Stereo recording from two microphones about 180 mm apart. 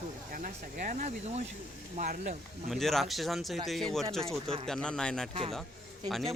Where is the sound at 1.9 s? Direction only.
50° right (ahead or behind).